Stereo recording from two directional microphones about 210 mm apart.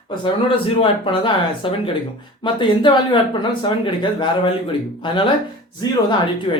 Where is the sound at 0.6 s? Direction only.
25° left (ahead or behind).